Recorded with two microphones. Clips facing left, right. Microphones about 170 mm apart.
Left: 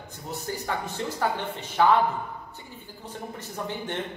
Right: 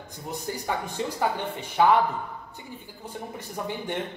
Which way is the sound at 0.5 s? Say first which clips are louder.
Right 1 dB; 15° right (ahead or behind).